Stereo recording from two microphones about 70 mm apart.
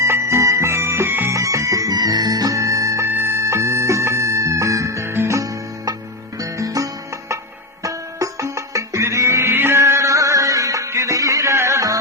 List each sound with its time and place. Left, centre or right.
0.0 s music: right
1.3 s music: right
2.0 s music: right
3.1 s music: right
5.4 s music: right